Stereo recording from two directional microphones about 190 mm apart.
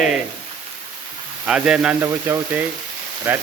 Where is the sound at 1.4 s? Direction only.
5° right (ahead or behind).